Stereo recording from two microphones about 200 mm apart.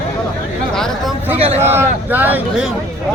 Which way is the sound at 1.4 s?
30° right (ahead or behind).